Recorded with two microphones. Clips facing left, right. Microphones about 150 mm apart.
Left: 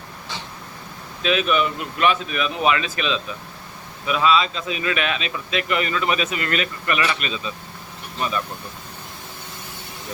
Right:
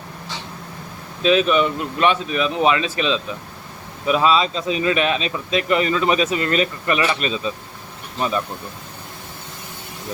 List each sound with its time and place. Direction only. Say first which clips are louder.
1.2 s speech: right 4 dB; 30° right (ahead or behind)